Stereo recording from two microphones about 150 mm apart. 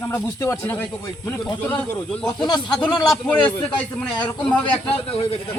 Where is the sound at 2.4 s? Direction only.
30° left (ahead or behind).